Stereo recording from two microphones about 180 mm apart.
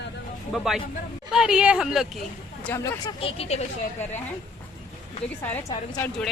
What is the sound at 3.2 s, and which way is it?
Speech, 30° left (ahead or behind).